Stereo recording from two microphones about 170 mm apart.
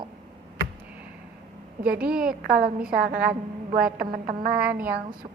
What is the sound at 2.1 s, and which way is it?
A woman's voice, 60° right (ahead or behind).